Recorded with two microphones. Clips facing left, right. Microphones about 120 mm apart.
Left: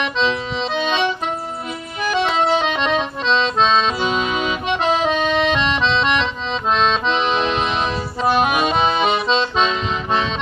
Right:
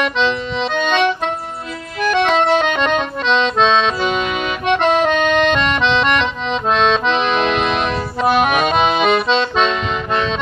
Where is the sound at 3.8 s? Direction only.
60° right (ahead or behind).